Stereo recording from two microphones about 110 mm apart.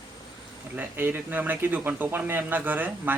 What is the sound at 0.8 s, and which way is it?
Speech, 15° right (ahead or behind).